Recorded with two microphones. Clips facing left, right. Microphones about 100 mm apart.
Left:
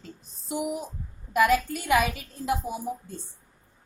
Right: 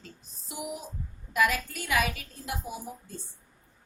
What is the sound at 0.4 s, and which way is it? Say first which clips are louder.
Speech: left 8 dB; 45° left (ahead or behind).